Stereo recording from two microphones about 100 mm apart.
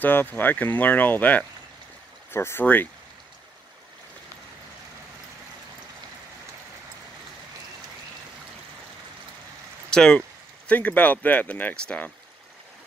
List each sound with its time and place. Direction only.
0.0 s speech: 20° left (ahead or behind)
9.8 s speech: 5° left (ahead or behind)